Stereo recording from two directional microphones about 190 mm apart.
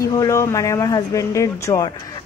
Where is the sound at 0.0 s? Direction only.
15° left (ahead or behind).